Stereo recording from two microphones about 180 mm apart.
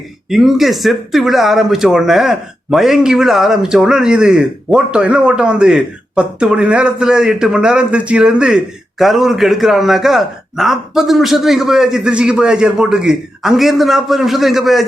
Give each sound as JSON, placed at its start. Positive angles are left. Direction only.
{"t": 0.3, "sound": "speech", "side_deg": 0}